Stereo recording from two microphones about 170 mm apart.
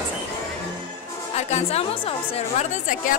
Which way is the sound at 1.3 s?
40° left (ahead or behind).